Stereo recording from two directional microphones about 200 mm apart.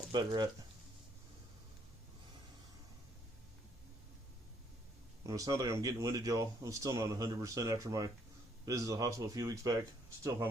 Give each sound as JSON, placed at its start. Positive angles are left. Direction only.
{"t": 0.1, "sound": "speech", "side_deg": -20}
{"t": 5.2, "sound": "speech", "side_deg": -15}